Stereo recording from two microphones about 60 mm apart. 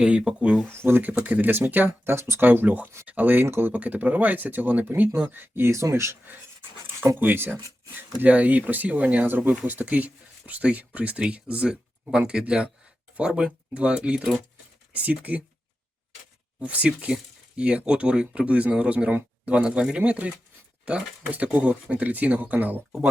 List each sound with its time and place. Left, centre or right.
0.0 s speech: centre
0.7 s speech: right
1.1 s speech: right
2.0 s speech: right
2.4 s speech: right
3.4 s speech: right
3.7 s speech: right
7.2 s speech: right
16.6 s speech: right